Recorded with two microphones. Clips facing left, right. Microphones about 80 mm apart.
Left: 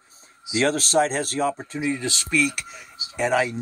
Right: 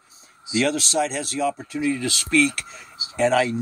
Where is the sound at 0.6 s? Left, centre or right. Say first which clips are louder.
Left 2 dB; left.